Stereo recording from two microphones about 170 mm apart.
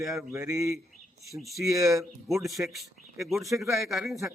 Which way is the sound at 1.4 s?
Centre (ahead or behind).